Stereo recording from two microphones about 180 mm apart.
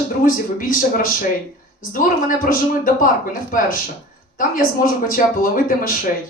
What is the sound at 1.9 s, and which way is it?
A woman's voice, 50° left (ahead or behind).